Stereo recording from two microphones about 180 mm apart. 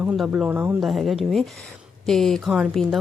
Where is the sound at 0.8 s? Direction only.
Centre (ahead or behind).